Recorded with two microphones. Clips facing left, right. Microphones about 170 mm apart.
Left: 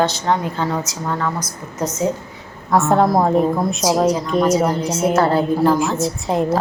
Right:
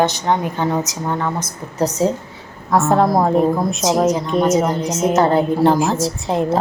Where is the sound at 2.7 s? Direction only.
Centre (ahead or behind).